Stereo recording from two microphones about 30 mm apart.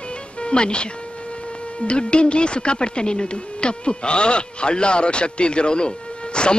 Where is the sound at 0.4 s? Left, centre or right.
Left.